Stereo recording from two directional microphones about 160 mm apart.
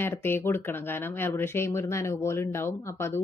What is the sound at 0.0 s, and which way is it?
Speech, 15° left (ahead or behind).